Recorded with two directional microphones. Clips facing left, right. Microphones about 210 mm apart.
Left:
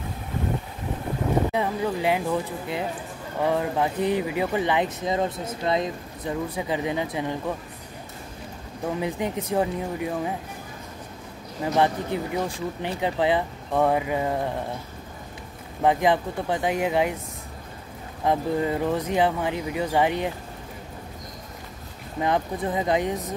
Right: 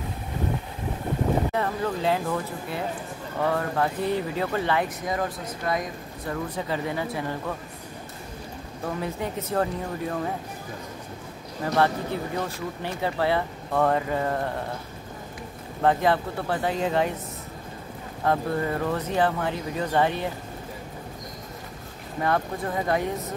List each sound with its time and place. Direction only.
1.5 s speech: 15° left (ahead or behind)
8.8 s speech: 15° left (ahead or behind)
11.6 s speech: 15° left (ahead or behind)
15.8 s speech: 15° left (ahead or behind)
18.2 s speech: 15° left (ahead or behind)
22.2 s speech: 20° left (ahead or behind)